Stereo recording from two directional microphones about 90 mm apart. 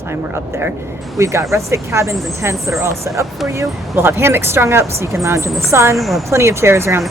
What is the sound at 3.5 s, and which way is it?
Speech, 30° right (ahead or behind).